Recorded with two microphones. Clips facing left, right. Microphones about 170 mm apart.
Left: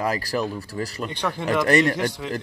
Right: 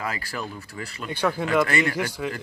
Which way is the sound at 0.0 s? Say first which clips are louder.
Left 7 dB; 40° left (ahead or behind).